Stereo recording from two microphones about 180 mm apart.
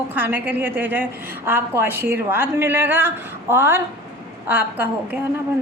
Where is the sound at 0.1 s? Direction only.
10° right (ahead or behind).